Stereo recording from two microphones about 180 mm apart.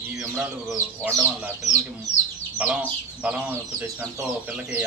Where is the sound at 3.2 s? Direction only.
5° right (ahead or behind).